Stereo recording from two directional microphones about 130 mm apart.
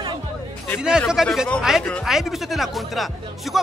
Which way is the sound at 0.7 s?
5° right (ahead or behind).